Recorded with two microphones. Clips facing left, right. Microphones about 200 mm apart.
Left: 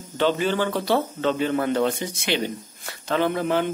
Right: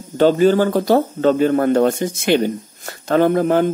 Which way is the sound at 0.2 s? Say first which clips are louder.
Right 9 dB; 40° right (ahead or behind).